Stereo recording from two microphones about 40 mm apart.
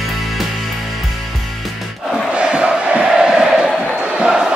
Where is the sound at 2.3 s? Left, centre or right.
Right.